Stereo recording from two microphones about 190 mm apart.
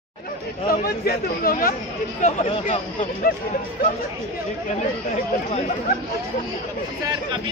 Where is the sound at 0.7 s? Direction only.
50° left (ahead or behind).